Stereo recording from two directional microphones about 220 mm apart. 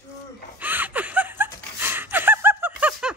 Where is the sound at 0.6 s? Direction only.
10° right (ahead or behind).